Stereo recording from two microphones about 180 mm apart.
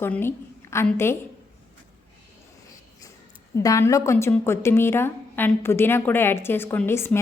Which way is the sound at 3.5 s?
15° left (ahead or behind).